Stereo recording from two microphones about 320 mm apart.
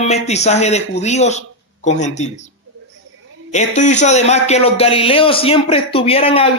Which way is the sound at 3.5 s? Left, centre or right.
Left.